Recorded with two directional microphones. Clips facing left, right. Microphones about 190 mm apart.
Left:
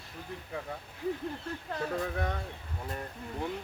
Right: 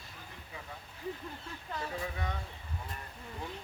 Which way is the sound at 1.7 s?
55° left (ahead or behind).